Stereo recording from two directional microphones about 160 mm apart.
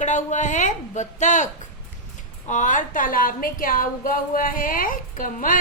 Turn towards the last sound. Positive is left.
turn(degrees=55)  # may be behind; listen again after turning